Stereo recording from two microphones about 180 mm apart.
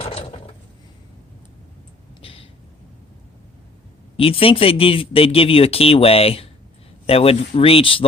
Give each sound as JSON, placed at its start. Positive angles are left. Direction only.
{"t": 0.0, "sound": "mechanisms", "side_deg": 35}
{"t": 2.2, "sound": "a sound", "side_deg": 30}
{"t": 4.2, "sound": "speech", "side_deg": 30}